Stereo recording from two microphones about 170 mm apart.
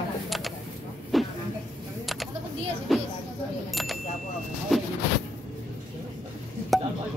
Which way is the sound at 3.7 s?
Centre (ahead or behind).